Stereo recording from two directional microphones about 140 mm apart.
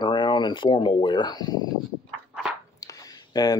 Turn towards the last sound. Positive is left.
turn(degrees=25)  # may be behind; listen again after turning